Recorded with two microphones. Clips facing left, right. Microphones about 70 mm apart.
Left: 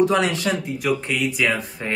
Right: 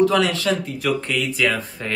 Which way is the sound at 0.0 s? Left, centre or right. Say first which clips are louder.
Right 1 dB; left.